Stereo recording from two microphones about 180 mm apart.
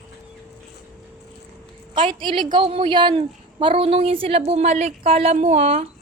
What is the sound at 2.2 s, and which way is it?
A woman's voice, 25° right (ahead or behind).